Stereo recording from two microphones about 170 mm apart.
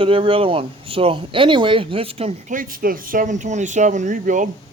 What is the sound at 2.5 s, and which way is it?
Speech, 55° right (ahead or behind).